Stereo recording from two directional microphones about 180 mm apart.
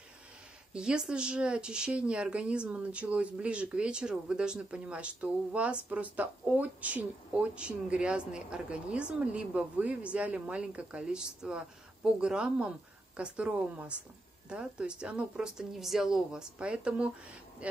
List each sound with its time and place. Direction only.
0.7 s speech: 5° right (ahead or behind)